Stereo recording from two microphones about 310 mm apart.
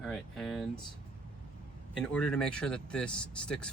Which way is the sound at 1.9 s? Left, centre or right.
Centre.